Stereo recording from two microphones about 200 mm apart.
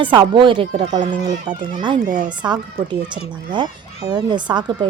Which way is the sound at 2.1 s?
40° right (ahead or behind).